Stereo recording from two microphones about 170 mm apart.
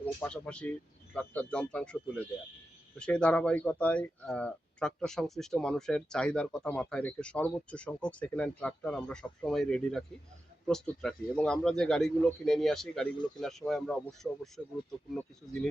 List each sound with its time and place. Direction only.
0.0 s speech: 5° left (ahead or behind)